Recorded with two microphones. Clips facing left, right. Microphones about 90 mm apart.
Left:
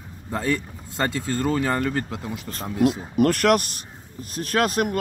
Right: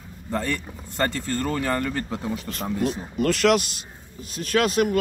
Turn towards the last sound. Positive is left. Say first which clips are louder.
# right 1 dB
turn(degrees=45)  # may be behind; listen again after turning